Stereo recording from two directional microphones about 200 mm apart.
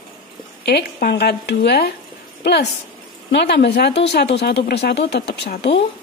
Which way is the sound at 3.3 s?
55° left (ahead or behind).